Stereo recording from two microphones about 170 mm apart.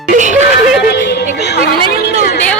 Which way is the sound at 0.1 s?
45° right (ahead or behind).